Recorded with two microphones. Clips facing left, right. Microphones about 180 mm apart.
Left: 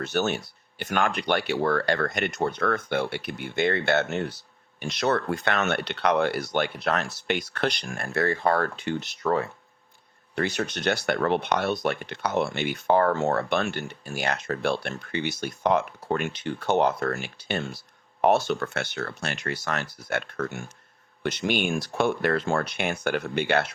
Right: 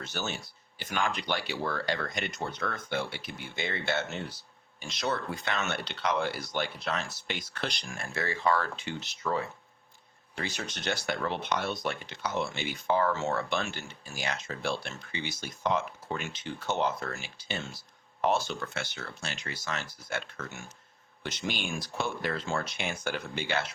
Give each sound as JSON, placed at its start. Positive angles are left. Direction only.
{"t": 0.0, "sound": "speech", "side_deg": 65}